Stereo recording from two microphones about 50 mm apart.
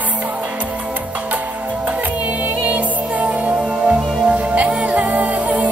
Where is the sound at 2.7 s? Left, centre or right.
Right.